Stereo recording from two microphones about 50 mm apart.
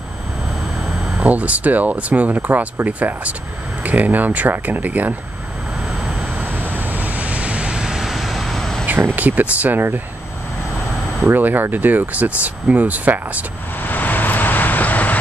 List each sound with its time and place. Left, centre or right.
0.8 s a sound: centre
1.2 s speech: right
6.4 s vehicle: right; by 8.8 s centre
9.1 s speech: right
11.2 s speech: right
13.8 s vehicle: left